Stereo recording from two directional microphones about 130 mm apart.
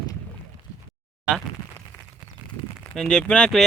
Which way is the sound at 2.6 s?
35° left (ahead or behind).